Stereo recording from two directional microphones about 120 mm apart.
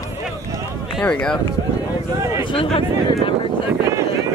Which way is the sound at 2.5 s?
45° left (ahead or behind).